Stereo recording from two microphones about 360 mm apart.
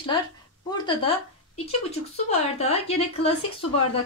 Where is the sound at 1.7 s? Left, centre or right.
Centre.